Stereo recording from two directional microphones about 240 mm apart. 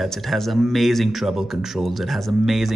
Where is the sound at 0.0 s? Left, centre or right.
Centre.